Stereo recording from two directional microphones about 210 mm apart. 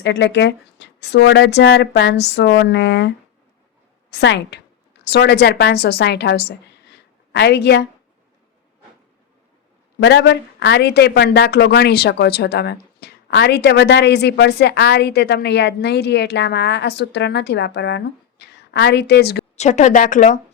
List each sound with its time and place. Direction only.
0.0 s speech: 55° left (ahead or behind)
4.1 s a woman's voice: 55° left (ahead or behind)
10.0 s speech: 55° left (ahead or behind)
19.5 s a woman's voice: 35° left (ahead or behind)